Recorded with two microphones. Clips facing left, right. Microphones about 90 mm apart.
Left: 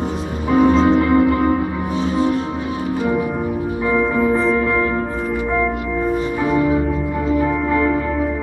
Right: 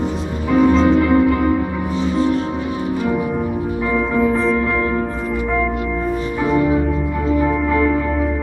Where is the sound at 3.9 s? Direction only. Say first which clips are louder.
Even; 10° left (ahead or behind).